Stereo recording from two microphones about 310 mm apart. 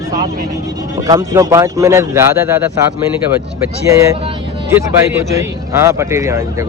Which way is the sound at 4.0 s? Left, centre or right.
Centre.